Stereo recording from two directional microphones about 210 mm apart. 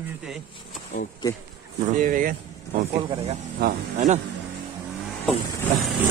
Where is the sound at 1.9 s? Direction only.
35° right (ahead or behind).